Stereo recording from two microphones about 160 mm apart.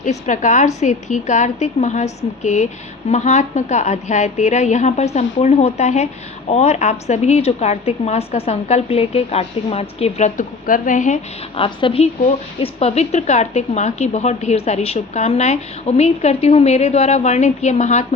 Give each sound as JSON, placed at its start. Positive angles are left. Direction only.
{"t": 0.0, "sound": "a woman's voice", "side_deg": 50}
{"t": 11.5, "sound": "a woman's voice", "side_deg": 35}